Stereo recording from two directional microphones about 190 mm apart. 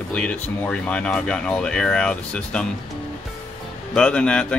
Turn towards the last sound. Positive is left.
turn(degrees=5)  # may be behind; listen again after turning